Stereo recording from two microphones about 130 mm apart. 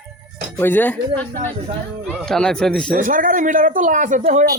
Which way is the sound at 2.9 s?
90° right.